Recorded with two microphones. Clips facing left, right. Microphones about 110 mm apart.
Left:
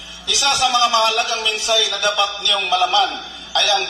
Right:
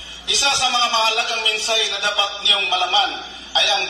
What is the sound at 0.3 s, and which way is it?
A man's voice, 30° left (ahead or behind).